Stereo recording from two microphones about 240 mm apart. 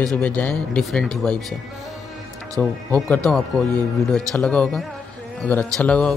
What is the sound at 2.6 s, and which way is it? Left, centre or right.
Speech, centre.